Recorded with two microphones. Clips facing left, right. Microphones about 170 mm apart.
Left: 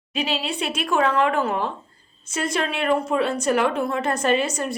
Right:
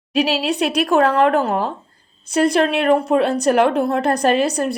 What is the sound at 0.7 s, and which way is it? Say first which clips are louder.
A woman's voice: right 5 dB; 40° right (ahead or behind).